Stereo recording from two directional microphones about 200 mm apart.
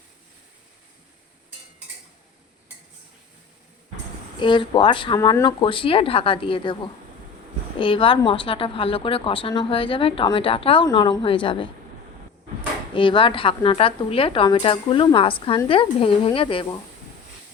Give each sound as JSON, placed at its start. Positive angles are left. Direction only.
{"t": 4.4, "sound": "a woman's voice", "side_deg": 25}
{"t": 12.9, "sound": "a woman's voice", "side_deg": 25}